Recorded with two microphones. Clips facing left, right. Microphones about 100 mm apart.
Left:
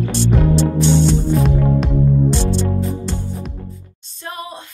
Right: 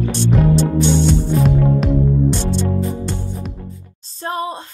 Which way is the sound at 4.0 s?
35° right (ahead or behind).